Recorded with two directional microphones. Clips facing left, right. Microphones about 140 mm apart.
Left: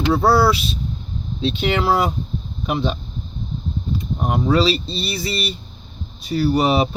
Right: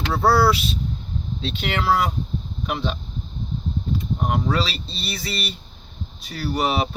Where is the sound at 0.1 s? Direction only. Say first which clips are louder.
Left 2 dB; 15° left (ahead or behind).